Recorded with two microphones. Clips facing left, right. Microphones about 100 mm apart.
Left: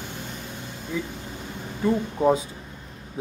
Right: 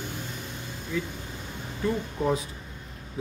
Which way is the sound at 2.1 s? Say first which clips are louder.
Left 7 dB; 30° left (ahead or behind).